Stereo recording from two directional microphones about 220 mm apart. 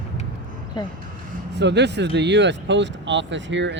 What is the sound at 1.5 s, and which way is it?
Speech, 50° right (ahead or behind).